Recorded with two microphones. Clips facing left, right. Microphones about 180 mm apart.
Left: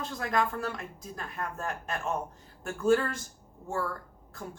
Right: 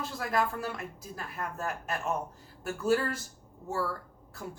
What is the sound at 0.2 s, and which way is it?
Speech, 5° right (ahead or behind).